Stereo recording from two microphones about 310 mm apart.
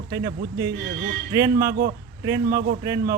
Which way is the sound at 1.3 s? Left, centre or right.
Centre.